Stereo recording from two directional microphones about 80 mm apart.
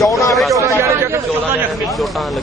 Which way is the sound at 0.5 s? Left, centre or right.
Right.